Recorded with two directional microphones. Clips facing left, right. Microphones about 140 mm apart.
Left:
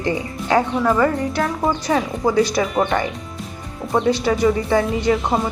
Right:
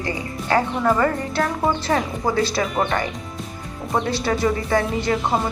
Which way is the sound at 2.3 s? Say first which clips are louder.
Left 4 dB; 15° left (ahead or behind).